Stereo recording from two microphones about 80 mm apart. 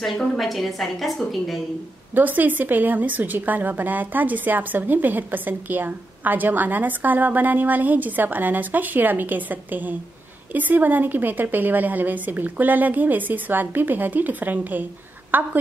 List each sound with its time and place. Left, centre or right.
0.0 s a woman's voice: centre
2.1 s a woman's voice: right